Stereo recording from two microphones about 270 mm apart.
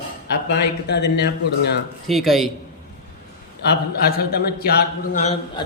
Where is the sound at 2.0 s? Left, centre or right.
Centre.